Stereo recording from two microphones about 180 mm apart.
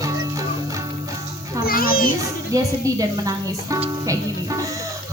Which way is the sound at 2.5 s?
20° right (ahead or behind).